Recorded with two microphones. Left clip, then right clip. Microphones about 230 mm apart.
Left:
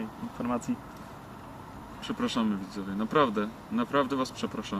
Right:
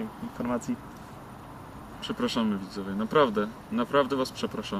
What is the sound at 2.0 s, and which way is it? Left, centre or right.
Speech, centre.